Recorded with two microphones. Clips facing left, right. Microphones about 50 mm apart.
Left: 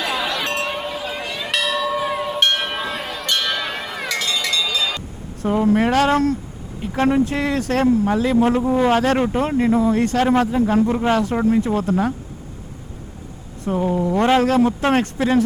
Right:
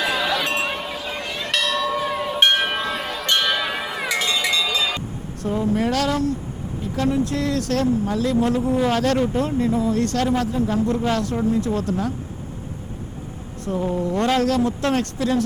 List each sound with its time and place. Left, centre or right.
0.0 s a sound: centre
3.2 s a sound: centre
5.5 s speech: left
5.8 s speech: left
6.9 s speech: left
7.3 s speech: left
9.1 s speech: left
9.7 s speech: centre
13.7 s speech: left